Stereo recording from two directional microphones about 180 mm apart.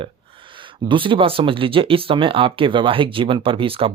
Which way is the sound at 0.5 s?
25° right (ahead or behind).